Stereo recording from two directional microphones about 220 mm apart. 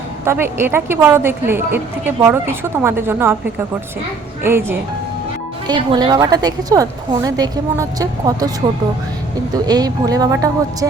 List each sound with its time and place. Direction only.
0.3 s a woman's voice: 10° right (ahead or behind)
4.4 s a woman's voice: 10° right (ahead or behind)
9.6 s a woman's voice: 15° right (ahead or behind)